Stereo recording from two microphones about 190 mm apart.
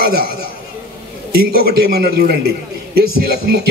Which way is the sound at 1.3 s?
55° right (ahead or behind).